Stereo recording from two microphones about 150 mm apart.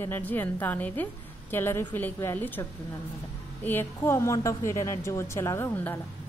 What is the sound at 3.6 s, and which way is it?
Speech, 15° left (ahead or behind).